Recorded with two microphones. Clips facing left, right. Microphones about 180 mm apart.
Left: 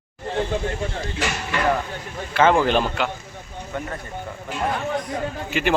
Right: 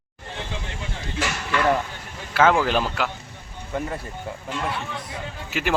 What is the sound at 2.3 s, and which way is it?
Speech, centre (ahead or behind).